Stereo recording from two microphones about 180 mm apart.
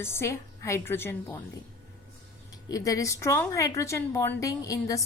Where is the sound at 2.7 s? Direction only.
20° left (ahead or behind).